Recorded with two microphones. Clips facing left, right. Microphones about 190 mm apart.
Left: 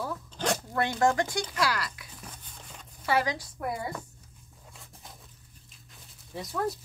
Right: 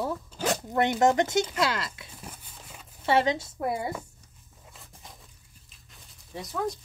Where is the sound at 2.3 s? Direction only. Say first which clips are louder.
Even; 5° right (ahead or behind).